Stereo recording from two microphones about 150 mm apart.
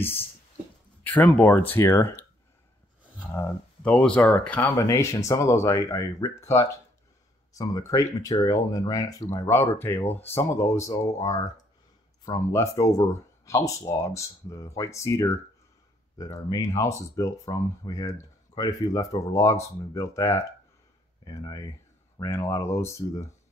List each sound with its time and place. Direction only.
1.0 s speech: 10° left (ahead or behind)
3.3 s speech: 10° left (ahead or behind)